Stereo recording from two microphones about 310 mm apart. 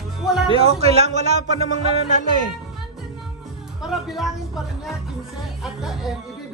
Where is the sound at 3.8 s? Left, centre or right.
Centre.